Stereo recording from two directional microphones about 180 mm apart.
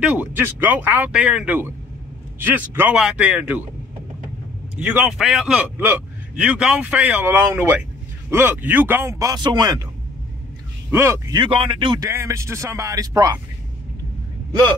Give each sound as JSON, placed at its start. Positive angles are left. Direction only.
{"t": 0.0, "sound": "a man's voice", "side_deg": -10}
{"t": 4.7, "sound": "a man's voice", "side_deg": -10}
{"t": 10.9, "sound": "speech", "side_deg": -15}
{"t": 12.1, "sound": "a man's voice", "side_deg": -15}